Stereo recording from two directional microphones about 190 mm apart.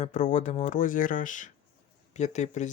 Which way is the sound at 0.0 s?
40° left (ahead or behind).